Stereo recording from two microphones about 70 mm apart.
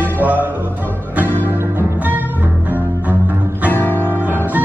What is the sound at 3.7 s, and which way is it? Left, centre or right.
Music, left.